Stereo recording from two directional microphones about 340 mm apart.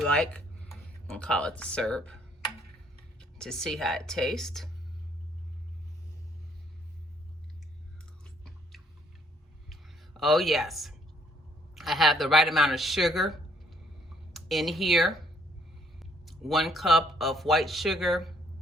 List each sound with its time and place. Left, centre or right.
0.0 s speech: centre
3.2 s speech: centre
8.2 s chewing: centre
9.6 s a sound: centre
11.7 s speech: centre